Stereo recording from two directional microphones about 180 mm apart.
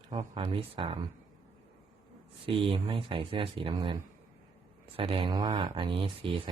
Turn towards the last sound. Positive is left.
turn(degrees=-30)  # may be behind; listen again after turning